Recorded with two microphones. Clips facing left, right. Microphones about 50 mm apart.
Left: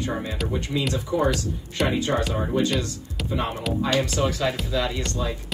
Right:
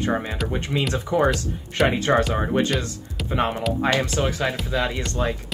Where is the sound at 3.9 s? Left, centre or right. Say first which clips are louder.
Right 1 dB; right.